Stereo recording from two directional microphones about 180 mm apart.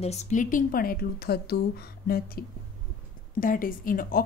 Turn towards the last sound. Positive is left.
turn(degrees=50)  # may be behind; listen again after turning